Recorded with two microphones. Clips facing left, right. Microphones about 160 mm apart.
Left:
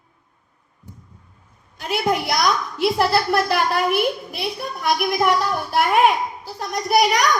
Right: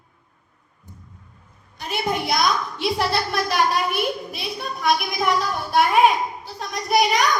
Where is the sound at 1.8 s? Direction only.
85° left.